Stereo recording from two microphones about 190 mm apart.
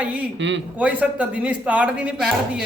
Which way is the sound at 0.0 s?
5° right (ahead or behind).